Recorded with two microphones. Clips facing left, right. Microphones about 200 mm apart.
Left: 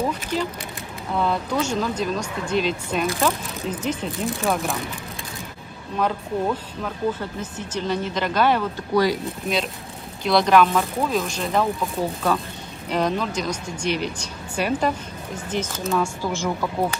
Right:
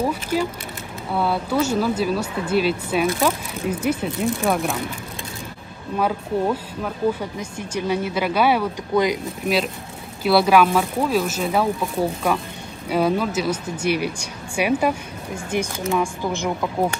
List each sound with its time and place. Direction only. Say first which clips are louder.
0.0 s a sound: right 3 dB; 10° right (ahead or behind)
1.1 s speech: right 2 dB; 5° right (ahead or behind)
5.9 s speech: right 2 dB; 10° right (ahead or behind)
10.2 s speech: right 1 dB; 5° right (ahead or behind)